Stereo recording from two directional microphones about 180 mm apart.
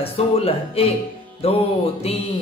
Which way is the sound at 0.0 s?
35° left (ahead or behind).